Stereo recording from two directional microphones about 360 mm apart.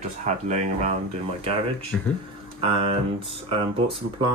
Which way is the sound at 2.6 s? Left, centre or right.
Centre.